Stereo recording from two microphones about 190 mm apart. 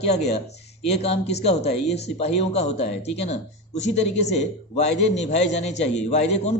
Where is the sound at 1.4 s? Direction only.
35° left (ahead or behind).